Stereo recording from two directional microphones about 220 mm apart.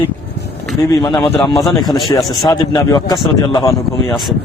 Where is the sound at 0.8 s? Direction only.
15° left (ahead or behind).